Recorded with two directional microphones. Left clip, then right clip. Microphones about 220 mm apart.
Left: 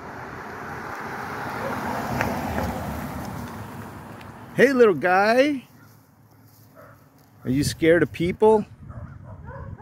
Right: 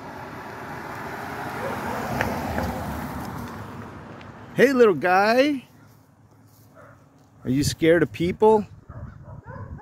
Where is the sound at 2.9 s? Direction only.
40° left (ahead or behind).